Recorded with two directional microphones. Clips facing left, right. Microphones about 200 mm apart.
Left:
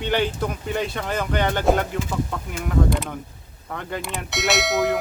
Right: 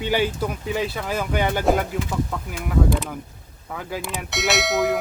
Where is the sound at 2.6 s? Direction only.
5° right (ahead or behind).